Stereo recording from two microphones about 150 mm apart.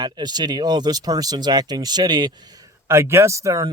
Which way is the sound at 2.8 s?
15° right (ahead or behind).